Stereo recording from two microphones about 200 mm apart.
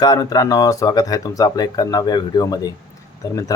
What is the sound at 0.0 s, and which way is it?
Speech, 20° left (ahead or behind).